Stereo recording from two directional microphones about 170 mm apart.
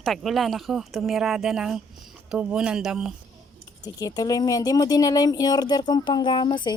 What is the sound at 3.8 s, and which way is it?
Speech, 20° left (ahead or behind).